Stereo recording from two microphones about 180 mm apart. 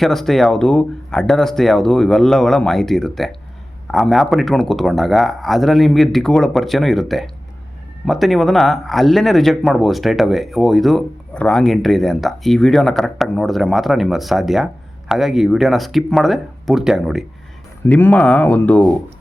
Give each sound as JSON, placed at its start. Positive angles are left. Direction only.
{"t": 0.0, "sound": "speech", "side_deg": 0}
{"t": 17.8, "sound": "speech", "side_deg": 10}